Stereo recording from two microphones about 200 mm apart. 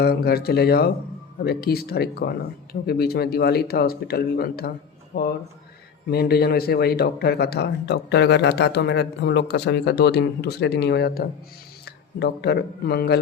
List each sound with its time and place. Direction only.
0.0 s speech: 50° left (ahead or behind)